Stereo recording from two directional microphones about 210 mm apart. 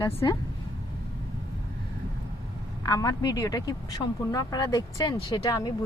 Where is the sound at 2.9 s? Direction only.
15° left (ahead or behind).